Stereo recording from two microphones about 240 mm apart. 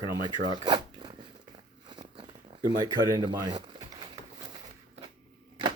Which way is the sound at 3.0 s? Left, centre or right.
Centre.